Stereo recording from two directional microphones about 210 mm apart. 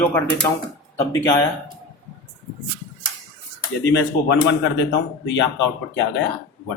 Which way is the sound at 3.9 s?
55° left (ahead or behind).